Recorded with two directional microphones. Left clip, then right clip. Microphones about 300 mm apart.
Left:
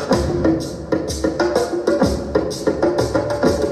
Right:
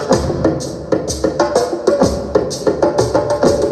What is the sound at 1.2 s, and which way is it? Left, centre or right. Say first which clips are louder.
Music: right 4 dB; right.